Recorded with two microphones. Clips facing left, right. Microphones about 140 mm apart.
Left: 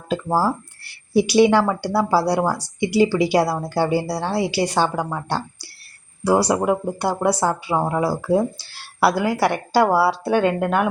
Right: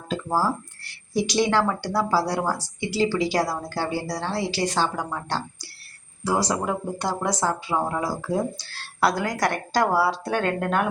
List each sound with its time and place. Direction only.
0.1 s speech: 15° left (ahead or behind)